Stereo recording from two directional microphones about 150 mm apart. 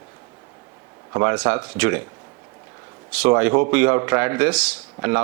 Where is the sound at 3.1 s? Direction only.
10° right (ahead or behind).